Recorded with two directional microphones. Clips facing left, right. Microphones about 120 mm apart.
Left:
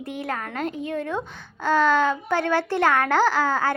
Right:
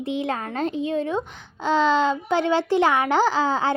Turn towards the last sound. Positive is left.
turn(degrees=-20)  # may be behind; listen again after turning